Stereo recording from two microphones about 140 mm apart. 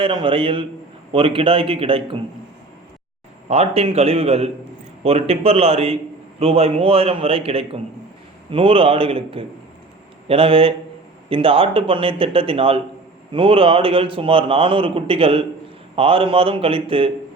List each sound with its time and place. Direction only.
0.0 s a man's voice: 35° right (ahead or behind)
3.5 s a man's voice: 45° right (ahead or behind)